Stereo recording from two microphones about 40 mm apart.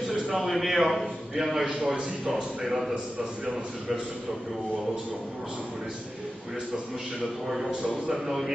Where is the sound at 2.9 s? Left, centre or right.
Right.